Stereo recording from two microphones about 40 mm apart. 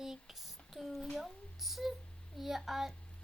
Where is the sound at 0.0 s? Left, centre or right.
Centre.